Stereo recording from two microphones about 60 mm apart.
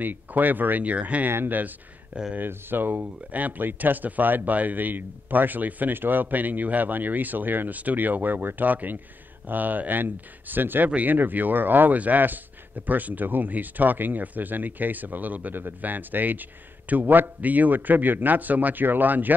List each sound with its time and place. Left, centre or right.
0.0 s speech: right
1.3 s speech: right